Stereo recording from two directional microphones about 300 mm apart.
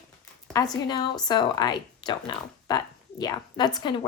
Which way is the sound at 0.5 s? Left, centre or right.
Centre.